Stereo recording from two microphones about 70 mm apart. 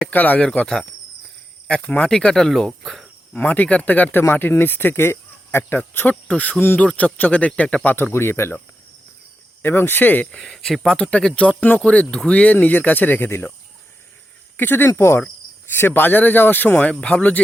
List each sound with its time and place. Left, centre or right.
0.1 s speech: left; by 3.1 s centre
3.3 s speech: centre
6.2 s speech: centre
7.9 s speech: left
9.6 s speech: left
10.3 s speech: centre; by 13.5 s left
14.5 s speech: left